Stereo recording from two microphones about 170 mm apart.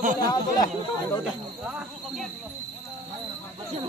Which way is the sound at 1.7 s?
5° right (ahead or behind).